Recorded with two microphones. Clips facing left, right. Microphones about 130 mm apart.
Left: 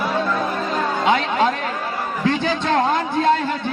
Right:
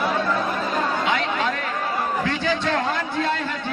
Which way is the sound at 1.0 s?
30° left (ahead or behind).